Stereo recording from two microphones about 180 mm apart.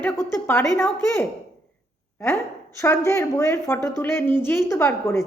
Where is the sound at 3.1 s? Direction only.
15° left (ahead or behind).